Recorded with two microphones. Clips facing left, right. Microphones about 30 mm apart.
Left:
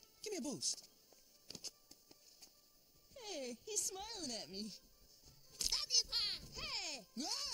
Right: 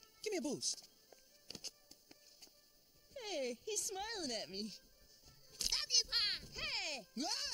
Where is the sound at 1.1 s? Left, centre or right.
Right.